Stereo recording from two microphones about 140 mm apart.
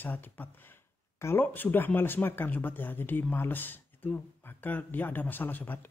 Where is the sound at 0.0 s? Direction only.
15° left (ahead or behind).